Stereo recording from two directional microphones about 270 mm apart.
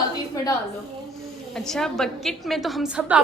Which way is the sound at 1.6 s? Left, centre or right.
Centre.